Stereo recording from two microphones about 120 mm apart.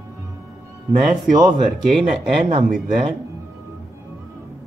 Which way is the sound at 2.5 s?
90° right.